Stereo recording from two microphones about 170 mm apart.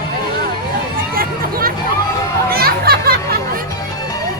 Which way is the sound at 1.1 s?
60° right (ahead or behind).